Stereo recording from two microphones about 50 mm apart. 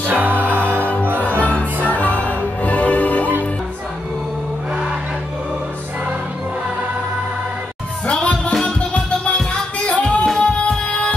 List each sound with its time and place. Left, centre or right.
0.1 s music: right
1.4 s music: left
8.1 s music: left